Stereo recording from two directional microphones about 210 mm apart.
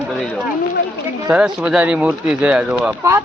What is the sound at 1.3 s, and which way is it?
Speech, 5° right (ahead or behind).